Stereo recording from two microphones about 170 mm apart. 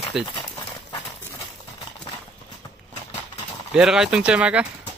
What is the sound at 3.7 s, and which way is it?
Speech, 5° right (ahead or behind).